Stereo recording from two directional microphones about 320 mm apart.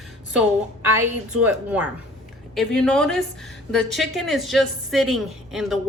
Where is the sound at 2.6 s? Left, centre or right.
Centre.